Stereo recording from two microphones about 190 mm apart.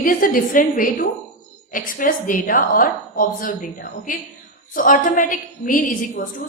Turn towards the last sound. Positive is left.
turn(degrees=45)  # may be behind; listen again after turning